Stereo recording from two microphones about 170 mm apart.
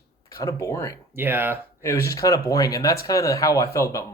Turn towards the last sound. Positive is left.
turn(degrees=20)  # may be behind; listen again after turning